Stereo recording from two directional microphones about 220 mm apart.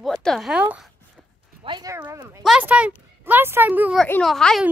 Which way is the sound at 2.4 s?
5° right (ahead or behind).